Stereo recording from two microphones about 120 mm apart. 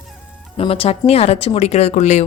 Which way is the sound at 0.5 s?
50° left (ahead or behind).